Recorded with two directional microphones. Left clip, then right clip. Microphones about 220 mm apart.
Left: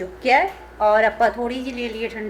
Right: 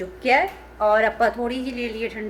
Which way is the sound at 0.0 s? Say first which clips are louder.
Left 2 dB; 5° left (ahead or behind).